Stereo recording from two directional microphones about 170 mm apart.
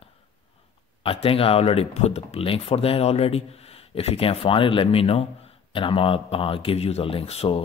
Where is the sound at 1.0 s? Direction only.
35° left (ahead or behind).